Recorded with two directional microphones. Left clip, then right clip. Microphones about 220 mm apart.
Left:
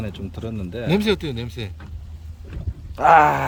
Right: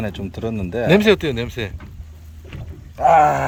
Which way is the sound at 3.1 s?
5° right (ahead or behind).